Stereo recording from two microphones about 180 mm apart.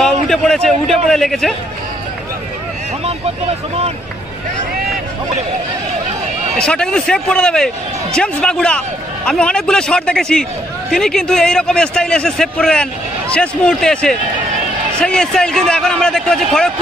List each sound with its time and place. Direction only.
0.0 s a sound: 5° left (ahead or behind)
3.1 s vehicle: 30° right (ahead or behind)
6.5 s a man's voice: 5° left (ahead or behind)